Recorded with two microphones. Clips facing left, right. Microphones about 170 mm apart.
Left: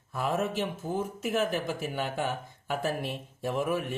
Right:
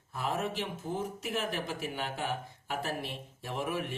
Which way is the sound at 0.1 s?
50° left (ahead or behind).